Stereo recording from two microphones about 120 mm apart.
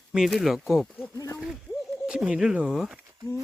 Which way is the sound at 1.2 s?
25° left (ahead or behind).